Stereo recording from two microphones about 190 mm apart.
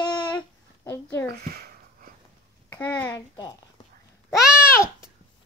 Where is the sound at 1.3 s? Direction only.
50° right (ahead or behind).